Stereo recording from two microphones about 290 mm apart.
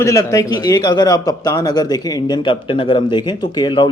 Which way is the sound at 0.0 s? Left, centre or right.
Centre.